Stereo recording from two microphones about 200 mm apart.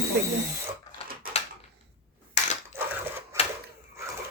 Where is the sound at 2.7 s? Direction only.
10° right (ahead or behind).